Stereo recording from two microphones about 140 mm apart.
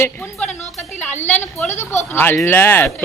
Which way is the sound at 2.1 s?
15° left (ahead or behind).